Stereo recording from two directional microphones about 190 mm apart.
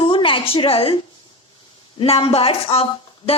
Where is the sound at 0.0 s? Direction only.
25° left (ahead or behind).